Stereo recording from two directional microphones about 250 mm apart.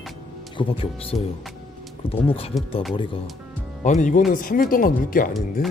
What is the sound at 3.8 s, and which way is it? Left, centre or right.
Speech, left.